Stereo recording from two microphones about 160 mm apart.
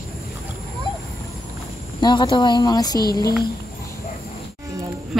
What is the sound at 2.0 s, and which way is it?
A woman's voice, 30° left (ahead or behind).